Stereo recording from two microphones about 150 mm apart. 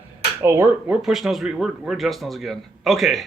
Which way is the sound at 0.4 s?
15° right (ahead or behind).